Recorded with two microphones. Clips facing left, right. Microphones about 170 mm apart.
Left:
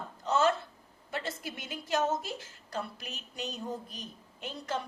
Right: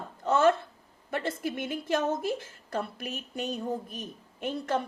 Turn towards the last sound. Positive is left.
turn(degrees=-50)  # may be behind; listen again after turning